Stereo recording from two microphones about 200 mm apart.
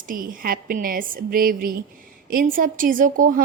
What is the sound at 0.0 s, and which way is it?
A woman's voice, 45° right (ahead or behind).